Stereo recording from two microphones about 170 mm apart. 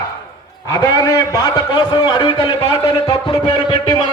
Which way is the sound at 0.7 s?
25° left (ahead or behind).